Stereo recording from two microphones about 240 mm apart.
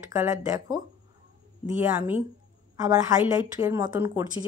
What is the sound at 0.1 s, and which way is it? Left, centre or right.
Speech, centre.